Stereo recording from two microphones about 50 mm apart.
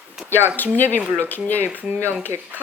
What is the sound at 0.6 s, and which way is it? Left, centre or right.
Speech, left.